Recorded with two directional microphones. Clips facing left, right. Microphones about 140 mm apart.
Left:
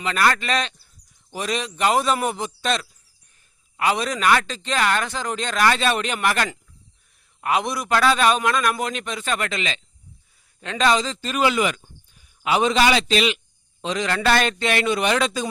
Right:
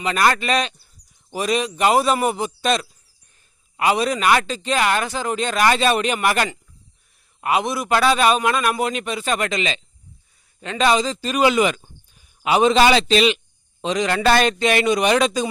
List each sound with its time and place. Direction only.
0.0 s a man's voice: 20° right (ahead or behind)
10.6 s a man's voice: 5° right (ahead or behind)